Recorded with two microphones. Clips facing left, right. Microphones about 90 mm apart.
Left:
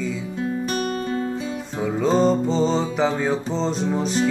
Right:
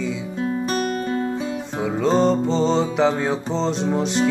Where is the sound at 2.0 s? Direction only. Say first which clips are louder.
Right 1 dB; 5° left (ahead or behind).